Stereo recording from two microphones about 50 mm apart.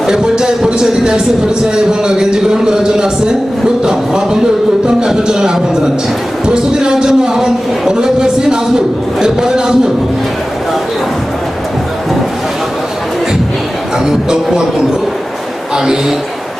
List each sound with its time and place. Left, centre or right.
0.1 s speech: centre
14.0 s speech: centre